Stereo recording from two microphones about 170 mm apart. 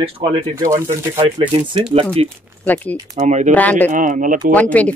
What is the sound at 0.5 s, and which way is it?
Speech, 20° right (ahead or behind).